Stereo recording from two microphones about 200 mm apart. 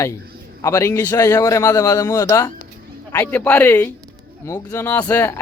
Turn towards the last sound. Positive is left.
turn(degrees=15)  # may be behind; listen again after turning